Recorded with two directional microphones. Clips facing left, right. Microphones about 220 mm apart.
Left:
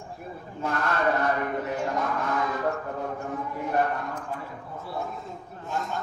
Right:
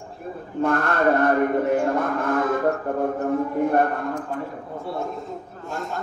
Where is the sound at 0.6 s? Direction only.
55° right (ahead or behind).